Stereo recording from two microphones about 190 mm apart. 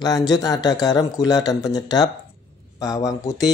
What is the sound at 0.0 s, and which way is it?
Speech, 20° left (ahead or behind).